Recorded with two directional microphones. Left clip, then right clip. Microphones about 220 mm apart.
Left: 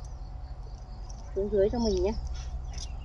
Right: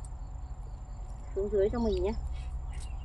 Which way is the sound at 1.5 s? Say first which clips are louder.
Left 3 dB; 5° left (ahead or behind).